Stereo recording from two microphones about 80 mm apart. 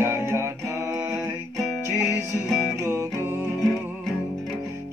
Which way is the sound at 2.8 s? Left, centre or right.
Right.